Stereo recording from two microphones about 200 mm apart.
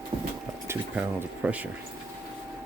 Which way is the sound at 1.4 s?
5° right (ahead or behind).